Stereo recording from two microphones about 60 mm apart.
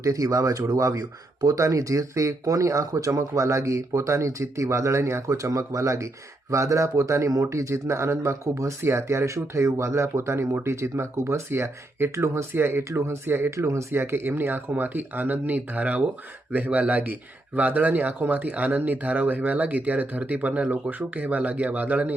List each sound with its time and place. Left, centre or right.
0.0 s speech: right